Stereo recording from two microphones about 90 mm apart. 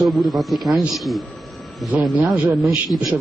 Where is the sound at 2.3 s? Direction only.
35° right (ahead or behind).